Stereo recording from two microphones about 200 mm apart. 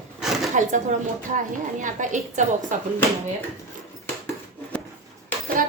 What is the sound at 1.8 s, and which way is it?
Speech, 40° right (ahead or behind).